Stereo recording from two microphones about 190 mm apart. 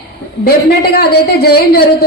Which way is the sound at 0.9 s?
55° left (ahead or behind).